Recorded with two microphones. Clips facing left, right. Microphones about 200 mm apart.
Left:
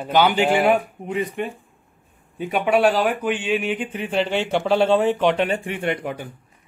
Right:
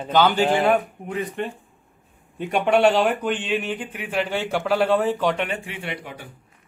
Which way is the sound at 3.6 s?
15° left (ahead or behind).